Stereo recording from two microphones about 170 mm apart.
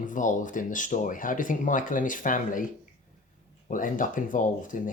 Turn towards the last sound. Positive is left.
turn(degrees=50)  # may be behind; listen again after turning